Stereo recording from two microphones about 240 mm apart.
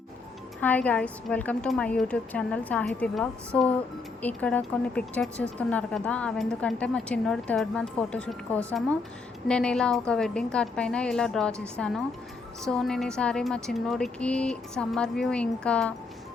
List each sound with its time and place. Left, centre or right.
0.6 s speech: centre
12.6 s speech: centre